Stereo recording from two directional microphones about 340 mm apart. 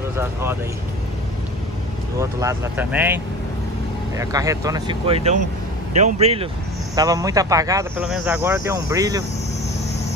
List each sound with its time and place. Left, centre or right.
0.2 s speech: centre
2.1 s speech: centre
4.2 s speech: centre